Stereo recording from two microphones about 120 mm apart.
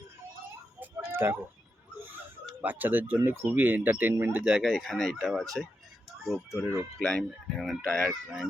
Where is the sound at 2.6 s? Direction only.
15° right (ahead or behind); by 8.2 s 10° left (ahead or behind).